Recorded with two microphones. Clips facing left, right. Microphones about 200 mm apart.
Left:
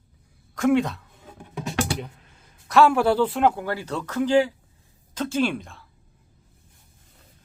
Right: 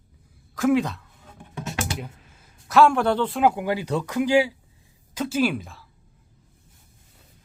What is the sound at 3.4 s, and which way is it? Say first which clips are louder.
Speech: right 1 dB; 10° right (ahead or behind).